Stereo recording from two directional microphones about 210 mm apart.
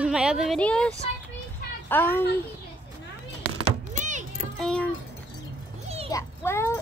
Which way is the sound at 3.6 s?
35° right (ahead or behind).